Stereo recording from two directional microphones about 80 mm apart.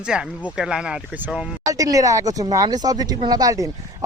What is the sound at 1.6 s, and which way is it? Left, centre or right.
Speech, right.